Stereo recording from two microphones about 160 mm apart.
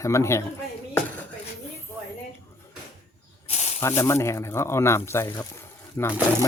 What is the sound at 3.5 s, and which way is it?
Snake, 45° left (ahead or behind).